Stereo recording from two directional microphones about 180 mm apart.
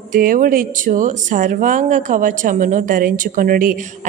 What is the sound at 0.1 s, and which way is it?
Speech, 50° right (ahead or behind).